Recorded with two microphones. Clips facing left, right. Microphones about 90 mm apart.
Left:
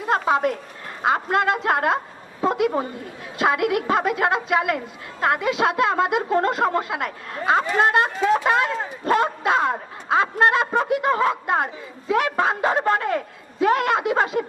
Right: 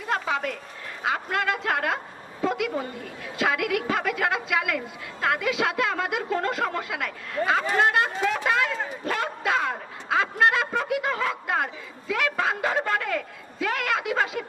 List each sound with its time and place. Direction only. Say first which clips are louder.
0.0 s a woman's voice: left 7 dB; 35° left (ahead or behind)